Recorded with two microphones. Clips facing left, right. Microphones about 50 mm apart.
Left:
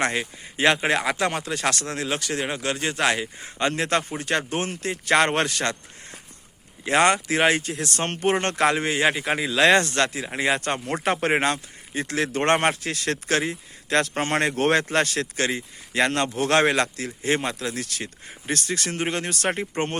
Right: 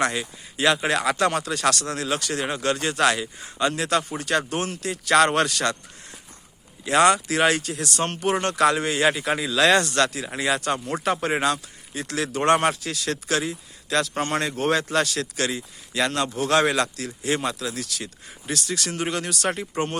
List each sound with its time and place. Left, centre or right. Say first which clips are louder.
0.0 s speech: even; left; by 2.9 s centre
2.9 s speech: right 2 dB; left
6.8 s speech: right 1 dB; left
10.8 s speech: left 1 dB; left
14.5 s speech: left 2 dB; left
14.8 s speech: even; left